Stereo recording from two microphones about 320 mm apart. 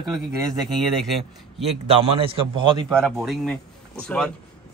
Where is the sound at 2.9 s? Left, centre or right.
Centre.